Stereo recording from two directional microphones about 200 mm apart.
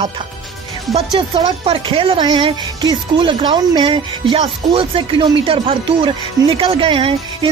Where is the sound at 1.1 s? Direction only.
25° right (ahead or behind).